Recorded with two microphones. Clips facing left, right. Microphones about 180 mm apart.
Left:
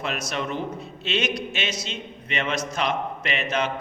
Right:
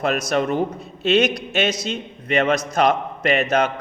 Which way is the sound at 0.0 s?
45° right (ahead or behind).